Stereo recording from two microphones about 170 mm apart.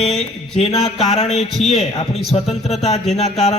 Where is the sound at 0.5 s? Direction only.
40° left (ahead or behind).